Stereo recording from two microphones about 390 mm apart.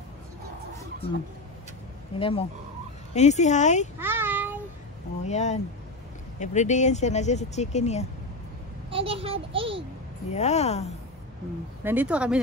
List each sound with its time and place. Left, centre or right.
2.1 s speech: centre
4.0 s child singing: centre
5.2 s speech: centre
8.9 s a child's voice: centre
10.3 s speech: centre
11.8 s speech: centre